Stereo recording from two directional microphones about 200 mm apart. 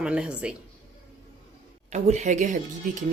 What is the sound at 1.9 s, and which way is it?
Speech, 35° right (ahead or behind).